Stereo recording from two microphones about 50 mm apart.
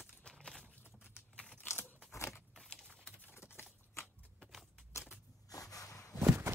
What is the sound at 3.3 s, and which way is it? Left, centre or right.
Typing, left.